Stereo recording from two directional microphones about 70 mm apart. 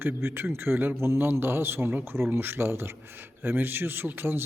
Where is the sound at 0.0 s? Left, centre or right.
Right.